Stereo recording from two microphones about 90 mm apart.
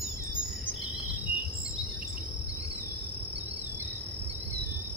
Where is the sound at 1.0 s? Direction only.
15° right (ahead or behind).